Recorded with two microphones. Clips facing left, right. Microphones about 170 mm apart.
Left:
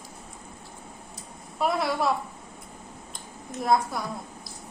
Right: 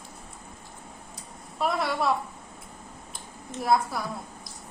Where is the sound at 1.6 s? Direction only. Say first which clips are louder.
Left 1 dB; centre (ahead or behind).